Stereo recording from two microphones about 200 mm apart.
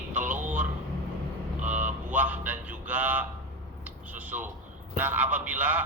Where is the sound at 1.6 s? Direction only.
40° right (ahead or behind).